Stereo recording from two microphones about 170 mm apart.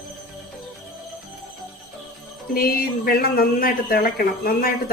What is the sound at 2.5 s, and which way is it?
Speech, 60° left (ahead or behind).